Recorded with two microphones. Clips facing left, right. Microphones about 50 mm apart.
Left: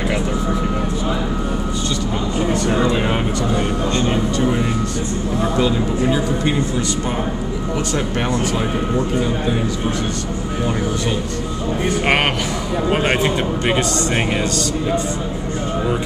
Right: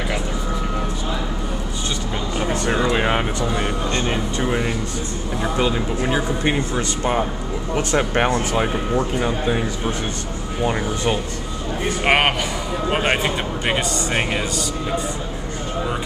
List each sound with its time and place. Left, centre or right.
2.9 s speech: right
7.7 s speech: right
12.9 s speech: centre